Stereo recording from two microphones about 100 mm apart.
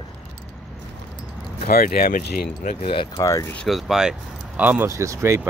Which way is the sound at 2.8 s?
60° left (ahead or behind).